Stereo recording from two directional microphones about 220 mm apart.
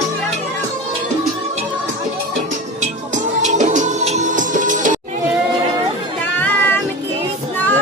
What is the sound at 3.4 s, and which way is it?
Music, 35° right (ahead or behind).